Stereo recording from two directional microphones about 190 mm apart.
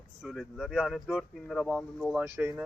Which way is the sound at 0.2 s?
Centre (ahead or behind).